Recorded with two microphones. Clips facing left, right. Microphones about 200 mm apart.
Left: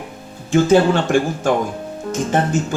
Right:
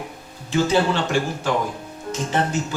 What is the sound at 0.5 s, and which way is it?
Speech, 50° left (ahead or behind).